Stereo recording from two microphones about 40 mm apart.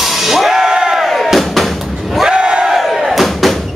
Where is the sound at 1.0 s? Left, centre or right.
Centre.